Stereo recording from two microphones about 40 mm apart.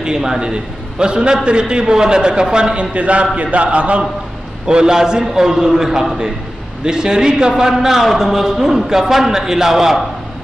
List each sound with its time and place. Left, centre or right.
0.0 s a man's voice: centre; by 3.3 s right
3.3 s a sound: right
4.6 s a man's voice: right